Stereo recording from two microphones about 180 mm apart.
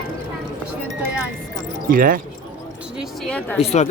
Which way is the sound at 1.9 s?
50° right (ahead or behind).